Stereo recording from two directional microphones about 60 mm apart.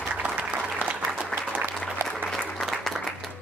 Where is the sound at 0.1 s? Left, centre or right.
Right.